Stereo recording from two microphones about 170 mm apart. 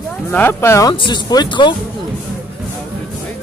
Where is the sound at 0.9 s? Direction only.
25° left (ahead or behind).